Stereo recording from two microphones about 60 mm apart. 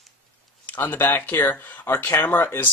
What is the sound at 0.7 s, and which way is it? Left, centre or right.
Speech, left.